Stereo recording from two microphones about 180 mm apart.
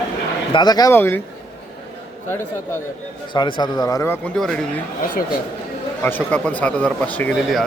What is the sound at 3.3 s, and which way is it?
Speech, 25° left (ahead or behind).